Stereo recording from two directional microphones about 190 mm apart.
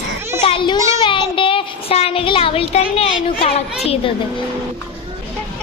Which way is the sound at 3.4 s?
30° left (ahead or behind).